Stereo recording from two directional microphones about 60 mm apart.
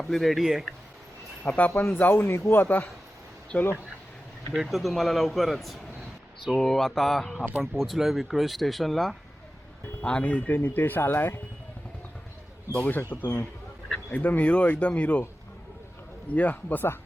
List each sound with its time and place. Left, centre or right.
0.0 s speech: centre
1.5 s speech: left
3.5 s speech: centre
4.5 s speech: centre
10.0 s speech: centre; by 11.3 s left
13.1 s speech: left
16.3 s speech: left